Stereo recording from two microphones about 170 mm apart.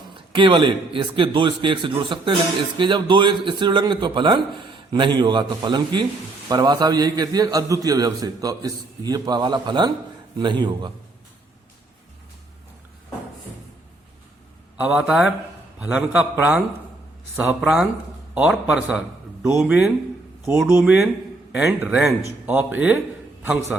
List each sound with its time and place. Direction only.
0.1 s a man's voice: 30° right (ahead or behind)
14.8 s a man's voice: 5° right (ahead or behind)